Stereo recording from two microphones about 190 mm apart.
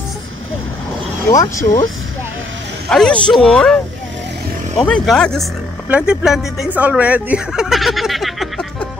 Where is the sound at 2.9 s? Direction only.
5° left (ahead or behind).